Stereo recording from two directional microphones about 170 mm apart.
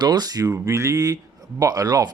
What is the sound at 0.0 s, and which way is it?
A man's voice, 25° right (ahead or behind).